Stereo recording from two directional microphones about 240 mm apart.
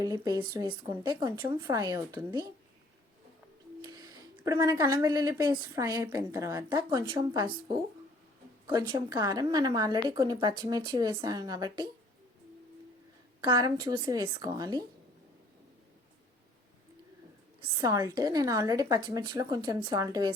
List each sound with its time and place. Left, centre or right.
0.0 s speech: centre
3.8 s speech: centre
8.6 s a woman's voice: centre
13.4 s speech: centre
17.6 s speech: centre